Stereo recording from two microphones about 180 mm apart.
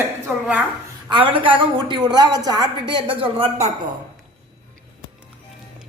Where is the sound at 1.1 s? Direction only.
30° right (ahead or behind).